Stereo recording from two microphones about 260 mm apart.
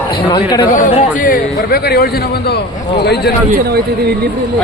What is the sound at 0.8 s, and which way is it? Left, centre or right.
A man's voice, left.